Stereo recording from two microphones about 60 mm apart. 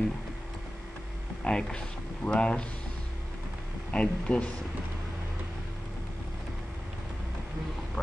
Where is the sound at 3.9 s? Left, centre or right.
Centre.